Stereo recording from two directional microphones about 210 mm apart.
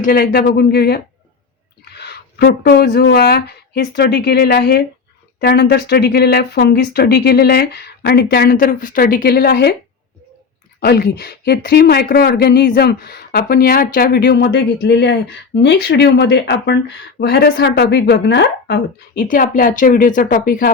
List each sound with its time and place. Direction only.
0.0 s speech: 45° left (ahead or behind)
10.8 s a woman's voice: 50° left (ahead or behind)